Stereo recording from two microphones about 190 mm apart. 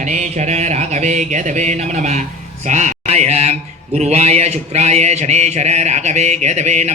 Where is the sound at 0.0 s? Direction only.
40° right (ahead or behind).